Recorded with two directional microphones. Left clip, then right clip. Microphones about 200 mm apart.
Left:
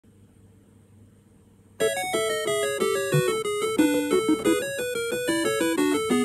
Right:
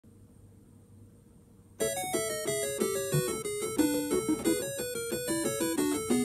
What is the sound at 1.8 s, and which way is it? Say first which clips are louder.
Music: left 7 dB; 55° left (ahead or behind).